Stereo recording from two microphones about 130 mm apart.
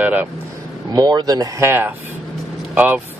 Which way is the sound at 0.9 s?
30° right (ahead or behind).